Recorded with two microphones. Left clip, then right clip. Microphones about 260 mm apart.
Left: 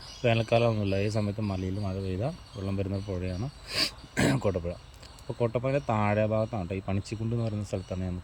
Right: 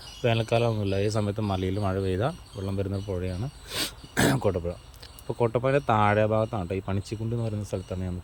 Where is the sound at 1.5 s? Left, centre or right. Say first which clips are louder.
Right 7 dB; right.